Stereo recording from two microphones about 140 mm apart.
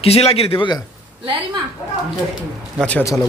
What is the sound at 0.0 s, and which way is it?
Speech, 45° left (ahead or behind).